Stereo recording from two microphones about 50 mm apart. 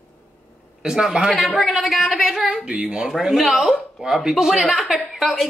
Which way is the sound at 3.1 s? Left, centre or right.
Centre.